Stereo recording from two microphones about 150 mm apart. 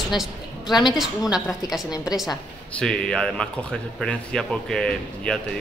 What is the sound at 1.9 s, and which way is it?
Speech, 25° left (ahead or behind).